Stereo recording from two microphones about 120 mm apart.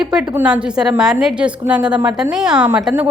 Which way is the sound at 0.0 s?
5° right (ahead or behind).